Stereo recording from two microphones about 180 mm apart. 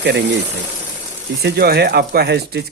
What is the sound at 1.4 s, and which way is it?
Speech, 65° right (ahead or behind).